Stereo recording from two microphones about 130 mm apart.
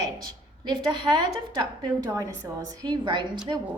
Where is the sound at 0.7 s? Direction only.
35° right (ahead or behind).